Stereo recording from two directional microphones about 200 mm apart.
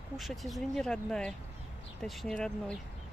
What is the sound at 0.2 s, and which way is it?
Speech, centre (ahead or behind).